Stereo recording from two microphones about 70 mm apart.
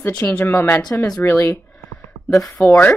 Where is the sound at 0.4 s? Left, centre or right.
Left.